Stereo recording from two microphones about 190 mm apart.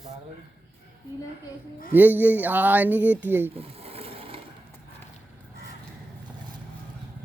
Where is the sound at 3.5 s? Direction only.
30° right (ahead or behind).